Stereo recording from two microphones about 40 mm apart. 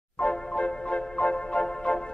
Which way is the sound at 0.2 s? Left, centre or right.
Left.